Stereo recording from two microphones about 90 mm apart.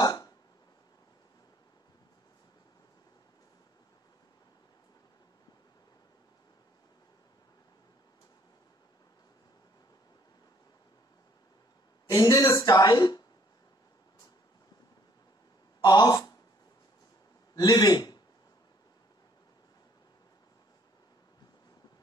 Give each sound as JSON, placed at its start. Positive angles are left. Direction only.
{"t": 0.0, "sound": "burping", "side_deg": 45}
{"t": 12.1, "sound": "speech", "side_deg": 50}
{"t": 15.8, "sound": "speech", "side_deg": 50}
{"t": 17.6, "sound": "a man's voice", "side_deg": 50}